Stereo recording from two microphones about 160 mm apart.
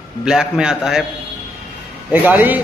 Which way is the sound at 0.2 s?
5° right (ahead or behind).